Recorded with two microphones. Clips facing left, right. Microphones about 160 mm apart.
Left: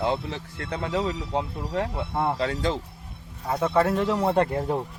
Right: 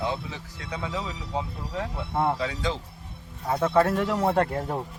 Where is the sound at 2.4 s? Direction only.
55° left (ahead or behind).